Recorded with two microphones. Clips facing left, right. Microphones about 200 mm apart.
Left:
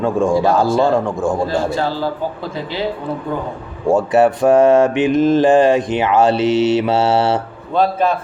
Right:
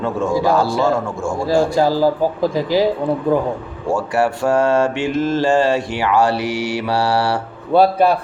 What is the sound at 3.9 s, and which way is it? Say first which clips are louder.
Mantra: left 5 dB; 20° left (ahead or behind).